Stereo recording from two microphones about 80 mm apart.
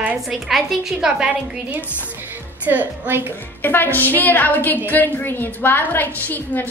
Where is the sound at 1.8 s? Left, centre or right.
Left.